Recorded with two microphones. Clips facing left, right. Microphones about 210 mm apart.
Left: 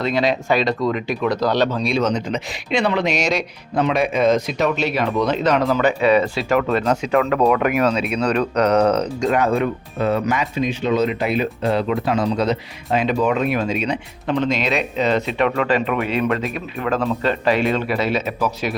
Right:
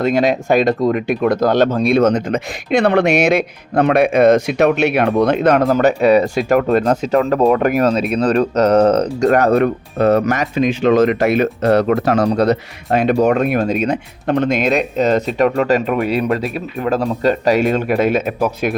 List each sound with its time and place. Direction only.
0.0 s speech: 50° right (ahead or behind)
7.3 s speech: 30° right (ahead or behind)
8.9 s speech: 60° right (ahead or behind)
9.5 s speech: 70° right (ahead or behind)
10.1 s speech: 40° right (ahead or behind)
11.0 s speech: 75° right (ahead or behind)
13.1 s speech: 45° right (ahead or behind)